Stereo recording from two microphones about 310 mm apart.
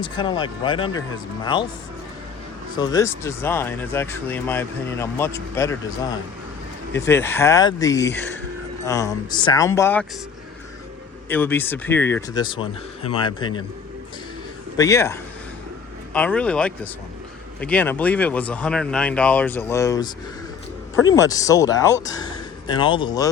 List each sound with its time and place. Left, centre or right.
0.2 s speech: centre
2.7 s speech: centre
11.3 s speech: centre
14.8 s speech: centre